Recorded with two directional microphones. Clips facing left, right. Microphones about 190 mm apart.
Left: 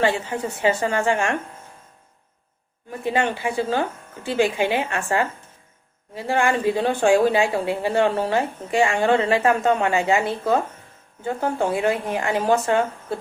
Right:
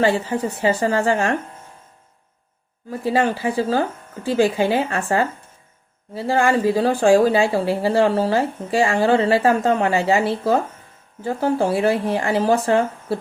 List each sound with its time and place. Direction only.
0.0 s speech: 35° right (ahead or behind)
3.0 s speech: 35° right (ahead or behind)